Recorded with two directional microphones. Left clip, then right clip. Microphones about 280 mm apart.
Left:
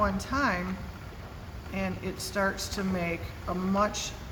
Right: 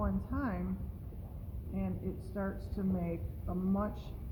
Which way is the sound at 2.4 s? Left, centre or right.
Centre.